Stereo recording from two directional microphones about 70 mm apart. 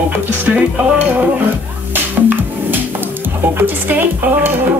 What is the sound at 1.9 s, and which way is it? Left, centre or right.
Music, right.